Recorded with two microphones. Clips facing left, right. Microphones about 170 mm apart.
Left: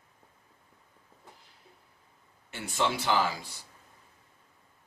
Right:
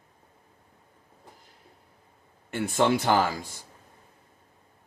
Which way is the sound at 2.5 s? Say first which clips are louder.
Right 7 dB; 55° right (ahead or behind).